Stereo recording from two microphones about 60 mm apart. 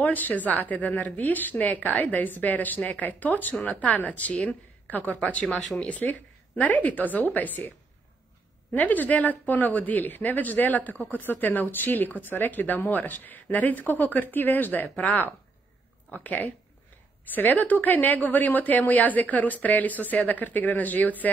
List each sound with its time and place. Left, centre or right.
0.0 s a woman's voice: left
8.7 s a woman's voice: left